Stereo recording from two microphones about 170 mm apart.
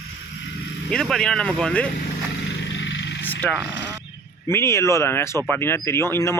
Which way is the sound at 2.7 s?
90° left.